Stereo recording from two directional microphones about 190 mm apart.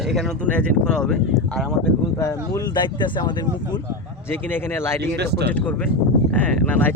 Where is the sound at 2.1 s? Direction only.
15° left (ahead or behind).